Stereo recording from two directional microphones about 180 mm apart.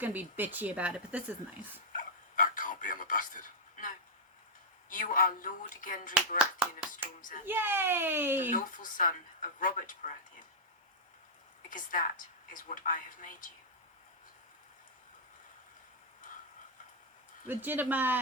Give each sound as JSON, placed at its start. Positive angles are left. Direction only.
{"t": 0.0, "sound": "a woman's voice", "side_deg": -10}
{"t": 1.9, "sound": "a sound", "side_deg": 50}
{"t": 4.9, "sound": "a woman's voice", "side_deg": 45}
{"t": 6.4, "sound": "speech", "side_deg": -5}
{"t": 6.9, "sound": "a woman's voice", "side_deg": 45}
{"t": 7.4, "sound": "a woman's voice", "side_deg": -10}
{"t": 8.4, "sound": "a woman's voice", "side_deg": 45}
{"t": 11.7, "sound": "a woman's voice", "side_deg": 45}
{"t": 17.5, "sound": "a woman's voice", "side_deg": -10}